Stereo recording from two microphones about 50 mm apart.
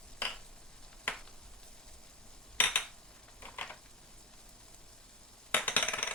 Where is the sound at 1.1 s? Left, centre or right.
Left.